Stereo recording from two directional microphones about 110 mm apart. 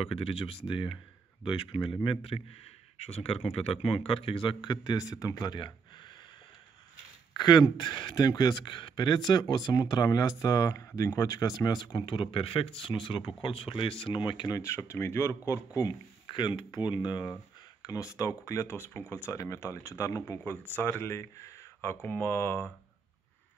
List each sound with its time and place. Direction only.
0.0 s speech: 60° left (ahead or behind)
3.0 s speech: 70° left (ahead or behind); by 6.1 s 45° left (ahead or behind)
7.3 s speech: 40° left (ahead or behind)
14.6 s speech: 25° left (ahead or behind)